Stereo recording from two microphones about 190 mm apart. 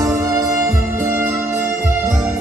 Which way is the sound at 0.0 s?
15° right (ahead or behind).